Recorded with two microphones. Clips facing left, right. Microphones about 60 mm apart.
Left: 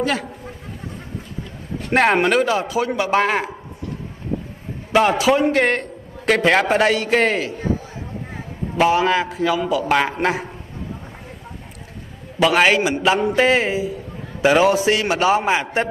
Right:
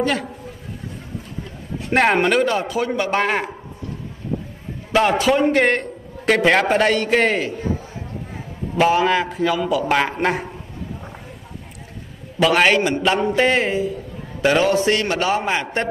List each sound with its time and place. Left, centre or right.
0.0 s a man's voice: centre
1.9 s a man's voice: centre
4.9 s a man's voice: centre
8.7 s a man's voice: centre
12.4 s a man's voice: centre